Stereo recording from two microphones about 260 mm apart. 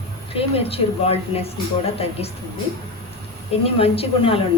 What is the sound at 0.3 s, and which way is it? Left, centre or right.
A woman's voice, left.